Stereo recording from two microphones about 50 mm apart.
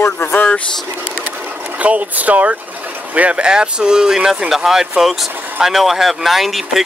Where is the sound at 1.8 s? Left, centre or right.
Right.